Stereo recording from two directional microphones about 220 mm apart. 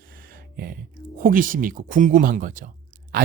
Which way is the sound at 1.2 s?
40° right (ahead or behind).